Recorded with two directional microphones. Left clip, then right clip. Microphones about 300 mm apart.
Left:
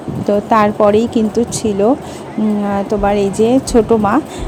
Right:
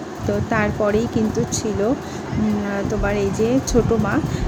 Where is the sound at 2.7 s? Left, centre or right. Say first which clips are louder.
Left 9 dB; left.